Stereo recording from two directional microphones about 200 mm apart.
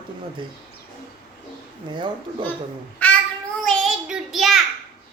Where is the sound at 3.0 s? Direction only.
5° left (ahead or behind).